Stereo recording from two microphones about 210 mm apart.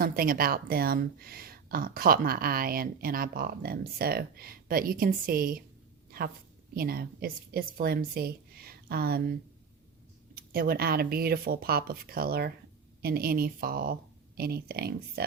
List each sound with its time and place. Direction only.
0.0 s a woman's voice: 45° right (ahead or behind)
6.1 s a sound: 45° right (ahead or behind)
6.7 s a woman's voice: 45° right (ahead or behind)
10.5 s a woman's voice: 45° right (ahead or behind)